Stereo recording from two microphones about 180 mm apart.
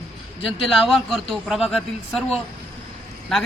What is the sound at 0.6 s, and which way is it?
A man's voice, centre (ahead or behind).